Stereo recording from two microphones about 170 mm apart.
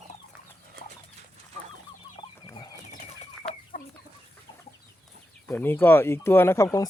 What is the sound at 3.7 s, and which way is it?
Chicken, 50° left (ahead or behind).